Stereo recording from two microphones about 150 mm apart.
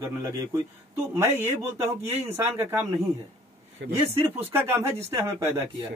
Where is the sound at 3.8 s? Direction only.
90° right.